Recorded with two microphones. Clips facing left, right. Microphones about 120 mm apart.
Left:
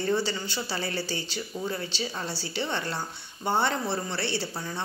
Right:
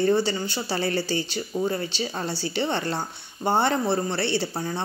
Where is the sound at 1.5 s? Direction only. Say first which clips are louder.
Right 7 dB; 40° right (ahead or behind).